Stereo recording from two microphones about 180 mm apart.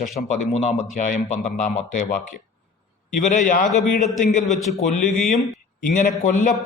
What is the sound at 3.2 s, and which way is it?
A man's voice, 40° left (ahead or behind).